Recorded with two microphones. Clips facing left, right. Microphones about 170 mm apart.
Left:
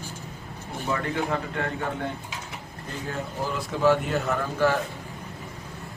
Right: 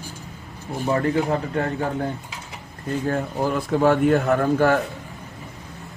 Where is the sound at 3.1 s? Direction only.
55° right (ahead or behind).